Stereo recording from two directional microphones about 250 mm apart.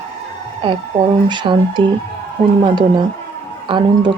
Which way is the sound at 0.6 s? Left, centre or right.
Centre.